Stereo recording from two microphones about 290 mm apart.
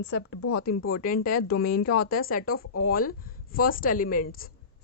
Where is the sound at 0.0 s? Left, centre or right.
Left.